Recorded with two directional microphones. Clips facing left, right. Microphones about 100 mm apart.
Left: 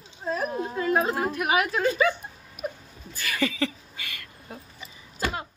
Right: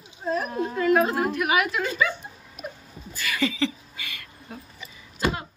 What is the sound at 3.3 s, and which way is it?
Speech, 45° left (ahead or behind).